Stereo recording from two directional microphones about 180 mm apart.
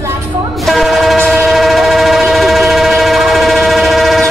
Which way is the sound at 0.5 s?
Centre (ahead or behind).